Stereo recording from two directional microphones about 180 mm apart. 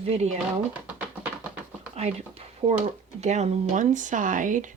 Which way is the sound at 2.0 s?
35° right (ahead or behind).